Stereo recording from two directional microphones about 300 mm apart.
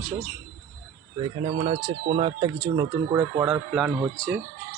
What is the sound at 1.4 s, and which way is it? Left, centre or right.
Speech, centre.